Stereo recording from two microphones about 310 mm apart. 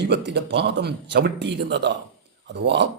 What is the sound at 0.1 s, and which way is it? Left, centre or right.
Speech, right.